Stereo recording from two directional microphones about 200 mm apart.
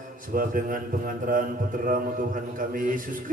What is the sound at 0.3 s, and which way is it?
A man's voice, 45° right (ahead or behind).